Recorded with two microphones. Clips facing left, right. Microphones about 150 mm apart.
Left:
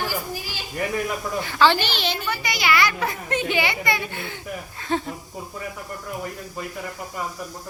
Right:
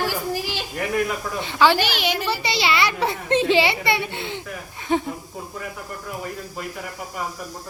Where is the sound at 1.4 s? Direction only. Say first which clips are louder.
Right 1 dB; 20° right (ahead or behind).